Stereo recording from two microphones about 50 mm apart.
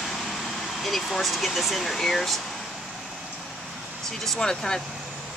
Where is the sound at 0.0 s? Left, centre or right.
Centre.